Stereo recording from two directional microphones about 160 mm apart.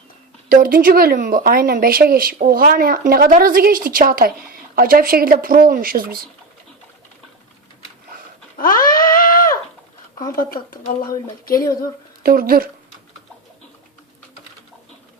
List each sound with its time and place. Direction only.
0.4 s speech: 60° right (ahead or behind)
8.5 s goat: 60° left (ahead or behind)
10.3 s speech: 60° left (ahead or behind)
12.2 s speech: 65° right (ahead or behind)